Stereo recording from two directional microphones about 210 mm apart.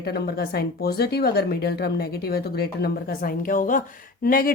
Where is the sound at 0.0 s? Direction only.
50° left (ahead or behind).